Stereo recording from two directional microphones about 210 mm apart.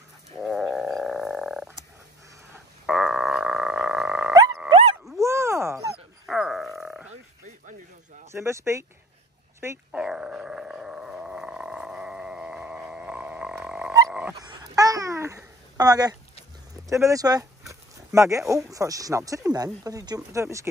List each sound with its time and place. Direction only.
0.4 s wild animals: centre (ahead or behind)
2.5 s frog: 5° right (ahead or behind)
5.1 s dog: 15° right (ahead or behind)
6.2 s a sound: centre (ahead or behind)
8.3 s speech: 15° right (ahead or behind)
9.6 s dog: 10° right (ahead or behind)
14.4 s babbling: 15° right (ahead or behind)
16.7 s a sound: 15° right (ahead or behind)
18.7 s speech: 15° right (ahead or behind)